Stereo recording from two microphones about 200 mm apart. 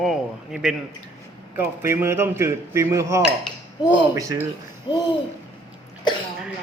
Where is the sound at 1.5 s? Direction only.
10° right (ahead or behind).